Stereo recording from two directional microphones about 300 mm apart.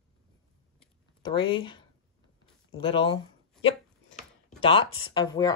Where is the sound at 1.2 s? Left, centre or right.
Centre.